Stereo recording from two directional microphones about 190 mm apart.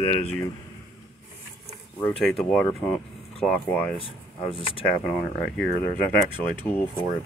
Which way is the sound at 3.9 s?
30° left (ahead or behind).